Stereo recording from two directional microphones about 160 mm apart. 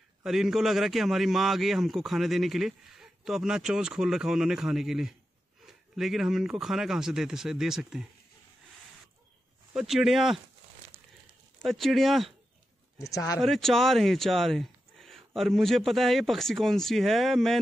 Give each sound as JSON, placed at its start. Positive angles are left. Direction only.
{"t": 0.2, "sound": "a man's voice", "side_deg": 0}
{"t": 9.8, "sound": "a man's voice", "side_deg": 0}
{"t": 11.6, "sound": "a man's voice", "side_deg": 0}
{"t": 13.0, "sound": "speech", "side_deg": 20}
{"t": 13.4, "sound": "a man's voice", "side_deg": 0}